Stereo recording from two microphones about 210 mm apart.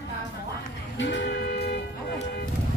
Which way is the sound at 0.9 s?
55° left (ahead or behind).